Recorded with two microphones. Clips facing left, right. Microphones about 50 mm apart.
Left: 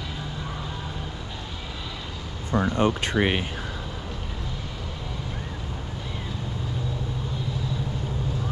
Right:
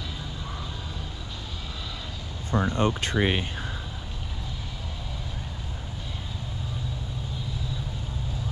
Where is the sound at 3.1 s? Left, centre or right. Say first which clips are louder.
Left 1 dB; left.